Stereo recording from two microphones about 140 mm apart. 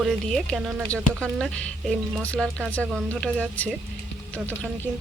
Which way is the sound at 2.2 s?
5° left (ahead or behind).